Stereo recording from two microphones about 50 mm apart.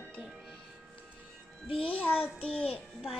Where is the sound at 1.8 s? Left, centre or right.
Left.